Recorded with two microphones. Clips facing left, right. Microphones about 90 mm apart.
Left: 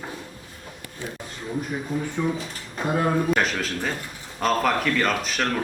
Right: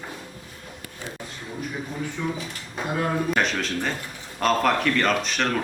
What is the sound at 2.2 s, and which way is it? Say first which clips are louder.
Speech: left 4 dB; 20° left (ahead or behind).